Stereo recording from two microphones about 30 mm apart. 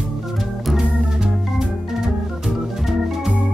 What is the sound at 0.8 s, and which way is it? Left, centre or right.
Organ, right.